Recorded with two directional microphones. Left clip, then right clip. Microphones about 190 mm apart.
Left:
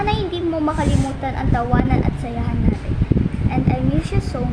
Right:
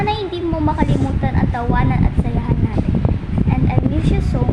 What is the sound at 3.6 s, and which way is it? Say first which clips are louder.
Speech: right 1 dB; 5° right (ahead or behind).